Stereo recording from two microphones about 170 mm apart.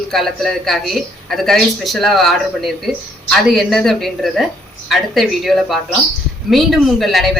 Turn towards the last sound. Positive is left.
turn(degrees=0)  # may be behind; listen again after turning